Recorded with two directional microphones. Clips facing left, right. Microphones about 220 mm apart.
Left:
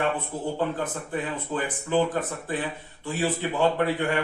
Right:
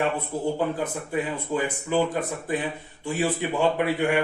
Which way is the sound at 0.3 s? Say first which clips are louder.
Right 2 dB; 10° right (ahead or behind).